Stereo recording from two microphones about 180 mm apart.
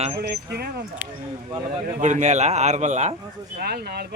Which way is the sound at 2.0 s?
40° right (ahead or behind).